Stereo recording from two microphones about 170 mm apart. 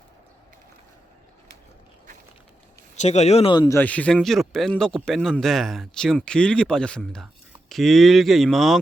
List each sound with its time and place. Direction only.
2.9 s speech: 40° left (ahead or behind)
3.5 s speech: 25° left (ahead or behind)
3.8 s speech: 10° left (ahead or behind)